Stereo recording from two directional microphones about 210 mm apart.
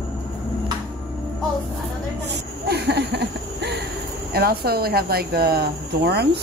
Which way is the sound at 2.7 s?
50° right (ahead or behind).